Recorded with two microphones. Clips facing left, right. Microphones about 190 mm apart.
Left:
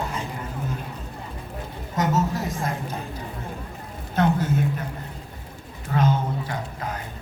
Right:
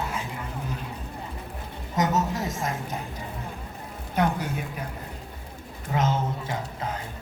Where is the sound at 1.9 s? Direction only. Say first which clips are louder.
Left 1 dB; 20° right (ahead or behind).